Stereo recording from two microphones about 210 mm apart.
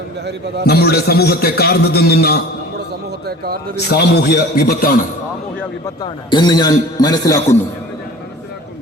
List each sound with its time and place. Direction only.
0.6 s a man's voice: 50° left (ahead or behind)
3.2 s a man's voice: 45° right (ahead or behind)
3.8 s a man's voice: 50° left (ahead or behind)
6.0 s a man's voice: 20° left (ahead or behind)